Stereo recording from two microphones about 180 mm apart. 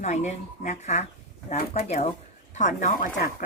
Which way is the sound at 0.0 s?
40° left (ahead or behind).